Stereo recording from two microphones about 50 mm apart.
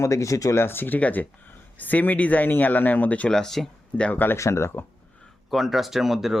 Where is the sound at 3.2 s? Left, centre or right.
Centre.